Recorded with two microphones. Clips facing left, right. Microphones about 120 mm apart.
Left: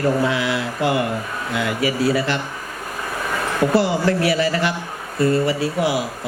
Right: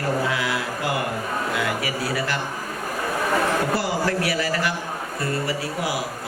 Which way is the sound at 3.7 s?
25° left (ahead or behind).